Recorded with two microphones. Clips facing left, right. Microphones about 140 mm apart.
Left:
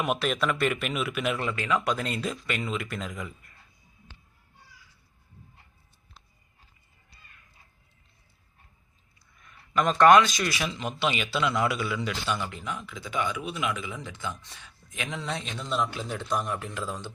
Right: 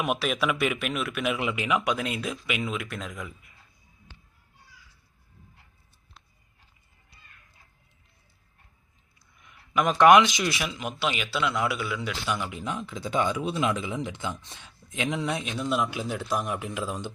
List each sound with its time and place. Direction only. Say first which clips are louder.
0.0 s speech: even; 5° right (ahead or behind)
1.8 s speech: even; centre (ahead or behind)
9.4 s speech: even; 10° right (ahead or behind)
12.5 s speech: right 3 dB; 25° right (ahead or behind)
15.2 s speech: right 5 dB; 10° right (ahead or behind)